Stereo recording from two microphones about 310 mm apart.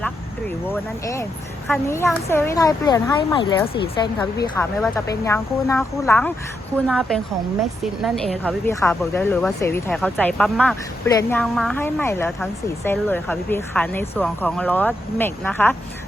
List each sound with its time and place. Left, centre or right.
1.6 s speech: centre